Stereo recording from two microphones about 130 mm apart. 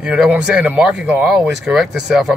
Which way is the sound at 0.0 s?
5° right (ahead or behind).